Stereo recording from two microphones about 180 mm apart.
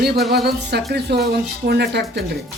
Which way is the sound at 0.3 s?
65° right (ahead or behind).